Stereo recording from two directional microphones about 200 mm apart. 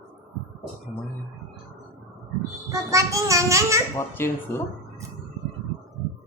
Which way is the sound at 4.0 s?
10° left (ahead or behind).